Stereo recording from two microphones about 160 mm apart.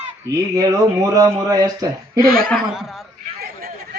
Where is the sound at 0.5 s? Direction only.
20° right (ahead or behind).